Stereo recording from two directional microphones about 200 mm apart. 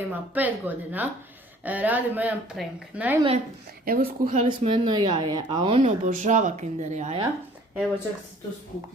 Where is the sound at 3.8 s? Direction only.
45° right (ahead or behind).